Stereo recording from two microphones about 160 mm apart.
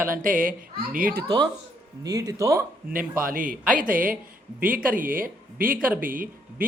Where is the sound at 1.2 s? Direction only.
25° right (ahead or behind).